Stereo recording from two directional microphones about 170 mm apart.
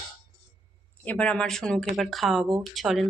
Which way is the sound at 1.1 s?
5° left (ahead or behind).